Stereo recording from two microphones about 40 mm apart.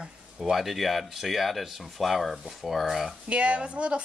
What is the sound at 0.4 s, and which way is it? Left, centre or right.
Speech, centre.